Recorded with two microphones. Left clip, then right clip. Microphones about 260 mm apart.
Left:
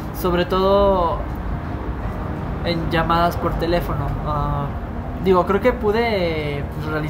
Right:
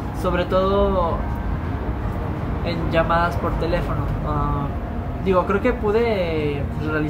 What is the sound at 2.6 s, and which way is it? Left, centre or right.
Speech, left.